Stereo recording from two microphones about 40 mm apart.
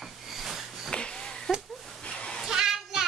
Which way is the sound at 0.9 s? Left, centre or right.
Left.